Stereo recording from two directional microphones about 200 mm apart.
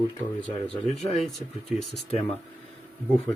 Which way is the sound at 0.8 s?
30° left (ahead or behind).